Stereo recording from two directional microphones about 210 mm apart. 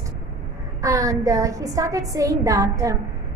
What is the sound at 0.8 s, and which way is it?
A woman's voice, 15° right (ahead or behind).